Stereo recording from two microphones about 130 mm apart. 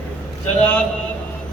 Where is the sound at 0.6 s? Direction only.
10° left (ahead or behind).